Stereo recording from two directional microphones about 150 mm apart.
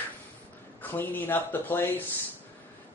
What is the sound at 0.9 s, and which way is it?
Speech, 15° left (ahead or behind).